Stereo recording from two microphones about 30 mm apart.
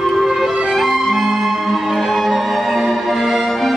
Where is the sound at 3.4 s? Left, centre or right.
Centre.